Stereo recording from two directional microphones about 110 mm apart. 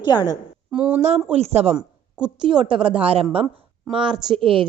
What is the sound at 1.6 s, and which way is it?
Speech, 80° right.